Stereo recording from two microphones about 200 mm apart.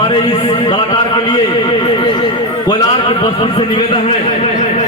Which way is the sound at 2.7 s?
20° left (ahead or behind).